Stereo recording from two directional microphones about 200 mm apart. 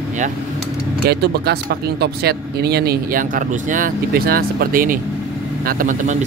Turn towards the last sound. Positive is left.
turn(degrees=-40)  # may be behind; listen again after turning